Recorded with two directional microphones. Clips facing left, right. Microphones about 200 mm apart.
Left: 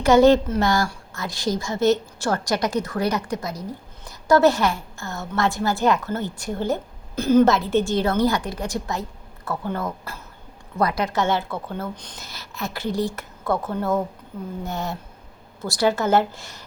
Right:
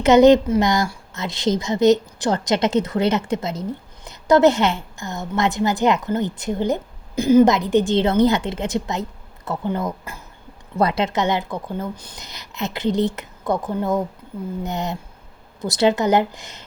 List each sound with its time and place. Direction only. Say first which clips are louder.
0.0 s a woman's voice: right 3 dB; 20° right (ahead or behind)